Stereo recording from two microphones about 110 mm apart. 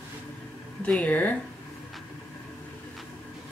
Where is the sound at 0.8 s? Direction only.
10° left (ahead or behind).